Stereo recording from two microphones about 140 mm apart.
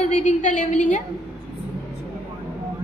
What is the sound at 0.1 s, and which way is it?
Speech, 60° left (ahead or behind).